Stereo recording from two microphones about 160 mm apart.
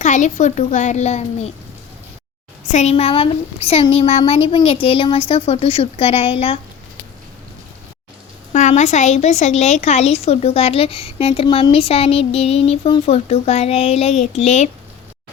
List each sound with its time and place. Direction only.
0.0 s a child's voice: 50° left (ahead or behind)
2.6 s a woman's voice: 45° left (ahead or behind)
8.5 s a woman's voice: 50° left (ahead or behind)